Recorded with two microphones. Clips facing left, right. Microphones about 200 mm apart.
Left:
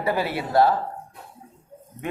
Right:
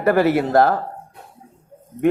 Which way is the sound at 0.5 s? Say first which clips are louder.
Even; 50° right (ahead or behind).